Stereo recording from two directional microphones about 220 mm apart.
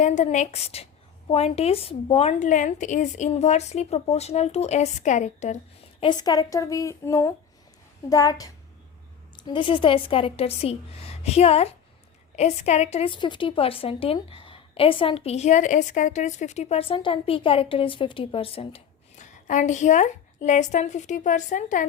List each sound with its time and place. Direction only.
0.0 s a woman's voice: 35° left (ahead or behind)
6.0 s a woman's voice: 20° left (ahead or behind); by 21.8 s 35° left (ahead or behind)